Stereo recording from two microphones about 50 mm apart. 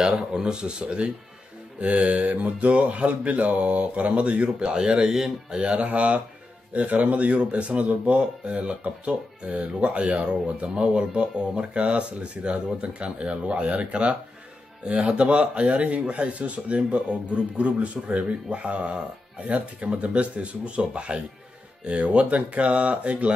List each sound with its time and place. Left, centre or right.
0.0 s speech: centre